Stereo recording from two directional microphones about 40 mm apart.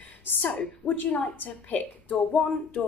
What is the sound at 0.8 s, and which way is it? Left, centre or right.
A woman's voice, left.